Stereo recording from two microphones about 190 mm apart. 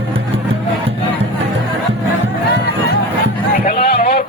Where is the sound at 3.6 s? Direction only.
55° left (ahead or behind).